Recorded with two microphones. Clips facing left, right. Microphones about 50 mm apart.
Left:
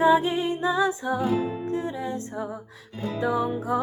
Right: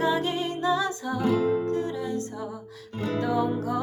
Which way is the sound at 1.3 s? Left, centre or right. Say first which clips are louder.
Right 3 dB; right.